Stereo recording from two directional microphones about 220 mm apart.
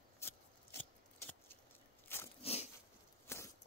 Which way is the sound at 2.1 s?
10° left (ahead or behind).